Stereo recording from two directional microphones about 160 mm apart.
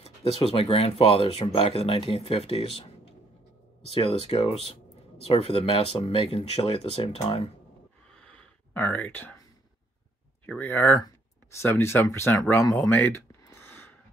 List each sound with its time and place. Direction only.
0.0 s speech: 40° left (ahead or behind)
8.2 s a sound: 10° left (ahead or behind)
10.4 s speech: 10° left (ahead or behind)